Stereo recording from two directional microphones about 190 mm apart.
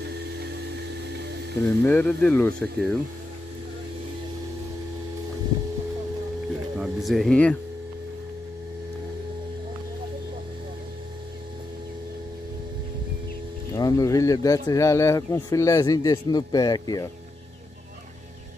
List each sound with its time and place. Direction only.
1.6 s speech: 10° left (ahead or behind)
6.8 s a sound: centre (ahead or behind)
13.7 s speech: 20° left (ahead or behind)